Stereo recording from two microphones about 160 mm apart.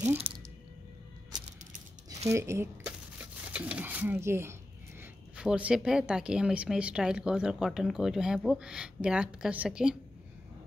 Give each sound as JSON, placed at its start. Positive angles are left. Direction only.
{"t": 0.3, "sound": "speech", "side_deg": -35}
{"t": 2.2, "sound": "a woman's voice", "side_deg": -20}